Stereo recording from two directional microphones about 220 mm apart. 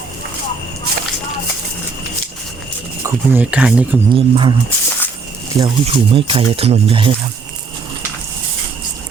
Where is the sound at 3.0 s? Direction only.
5° right (ahead or behind).